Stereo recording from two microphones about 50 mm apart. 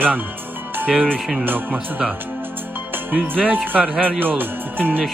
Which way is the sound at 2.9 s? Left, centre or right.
Right.